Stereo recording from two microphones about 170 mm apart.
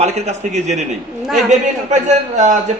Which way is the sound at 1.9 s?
45° right (ahead or behind).